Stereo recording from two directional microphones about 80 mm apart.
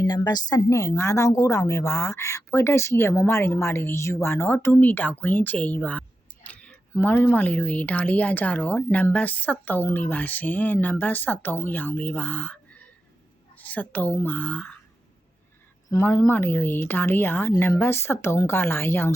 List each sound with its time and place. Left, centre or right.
0.0 s a woman's voice: left
0.7 s speech: left; by 14.8 s centre
16.0 s speech: left